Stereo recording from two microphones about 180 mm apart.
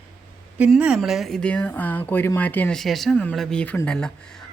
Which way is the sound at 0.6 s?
5° right (ahead or behind).